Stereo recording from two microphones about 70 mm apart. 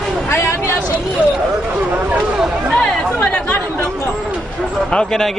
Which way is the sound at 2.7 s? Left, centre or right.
Centre.